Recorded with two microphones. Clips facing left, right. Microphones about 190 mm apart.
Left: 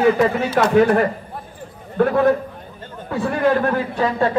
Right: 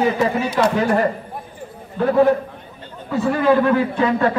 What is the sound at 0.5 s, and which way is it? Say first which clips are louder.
A man's voice: left 4 dB; 55° left (ahead or behind).